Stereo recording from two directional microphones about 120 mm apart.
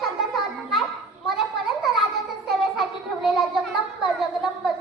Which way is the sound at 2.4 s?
Centre (ahead or behind).